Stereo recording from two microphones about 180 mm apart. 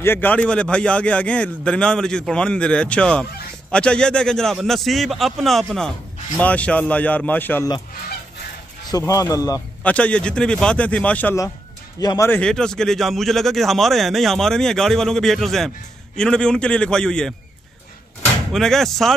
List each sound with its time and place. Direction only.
0.0 s a man's voice: 10° left (ahead or behind)
8.9 s speech: 15° left (ahead or behind)
9.8 s a man's voice: 5° left (ahead or behind)
18.5 s speech: centre (ahead or behind)